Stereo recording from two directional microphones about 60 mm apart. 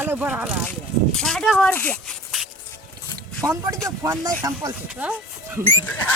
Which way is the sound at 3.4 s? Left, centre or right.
Right.